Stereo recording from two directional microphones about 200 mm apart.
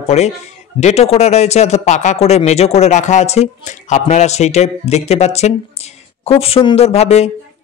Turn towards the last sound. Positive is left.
turn(degrees=35)  # may be behind; listen again after turning